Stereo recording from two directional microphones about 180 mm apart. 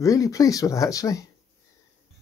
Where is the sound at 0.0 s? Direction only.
20° left (ahead or behind).